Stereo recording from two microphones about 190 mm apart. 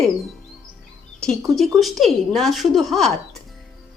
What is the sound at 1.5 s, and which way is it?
Speech, centre (ahead or behind).